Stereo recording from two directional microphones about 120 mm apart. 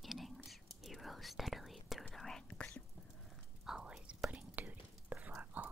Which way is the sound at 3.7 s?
5° right (ahead or behind).